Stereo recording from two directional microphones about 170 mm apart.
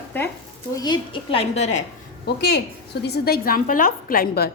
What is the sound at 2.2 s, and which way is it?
A woman's voice, 75° left (ahead or behind).